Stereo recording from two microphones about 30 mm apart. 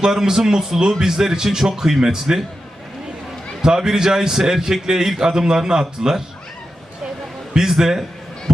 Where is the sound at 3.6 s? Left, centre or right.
Centre.